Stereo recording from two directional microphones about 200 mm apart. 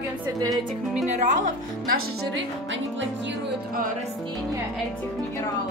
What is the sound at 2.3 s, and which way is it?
Music, 70° right (ahead or behind).